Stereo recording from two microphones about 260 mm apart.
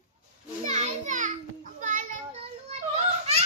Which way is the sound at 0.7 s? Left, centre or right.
Right.